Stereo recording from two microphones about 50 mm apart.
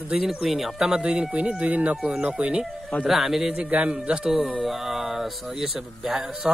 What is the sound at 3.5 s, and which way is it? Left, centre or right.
Speech, right.